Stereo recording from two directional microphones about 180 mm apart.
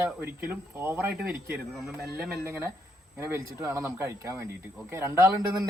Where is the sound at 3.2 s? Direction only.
15° right (ahead or behind).